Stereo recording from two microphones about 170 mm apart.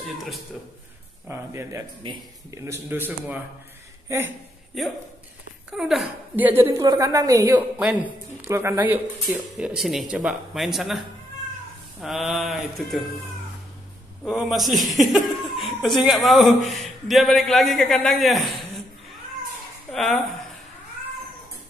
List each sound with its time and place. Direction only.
1.2 s speech: 15° right (ahead or behind)
5.7 s a woman's voice: centre (ahead or behind)
14.2 s speech: 5° right (ahead or behind)
19.9 s speech: centre (ahead or behind)